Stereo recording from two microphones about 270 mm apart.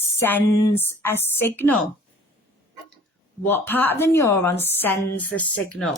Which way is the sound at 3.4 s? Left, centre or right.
Centre.